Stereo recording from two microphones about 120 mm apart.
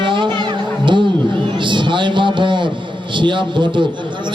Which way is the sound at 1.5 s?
40° right (ahead or behind).